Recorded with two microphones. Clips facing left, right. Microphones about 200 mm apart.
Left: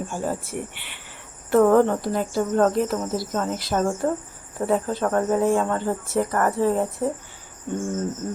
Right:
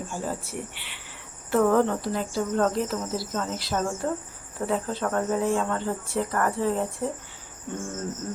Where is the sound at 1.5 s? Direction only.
50° left (ahead or behind).